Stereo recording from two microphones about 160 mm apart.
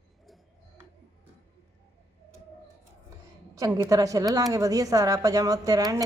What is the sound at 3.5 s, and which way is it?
A woman's voice, 15° right (ahead or behind).